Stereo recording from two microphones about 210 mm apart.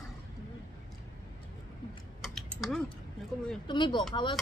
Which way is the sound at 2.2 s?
Centre (ahead or behind).